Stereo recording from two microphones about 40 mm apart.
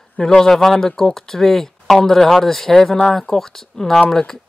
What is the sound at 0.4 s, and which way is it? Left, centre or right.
Speech, centre.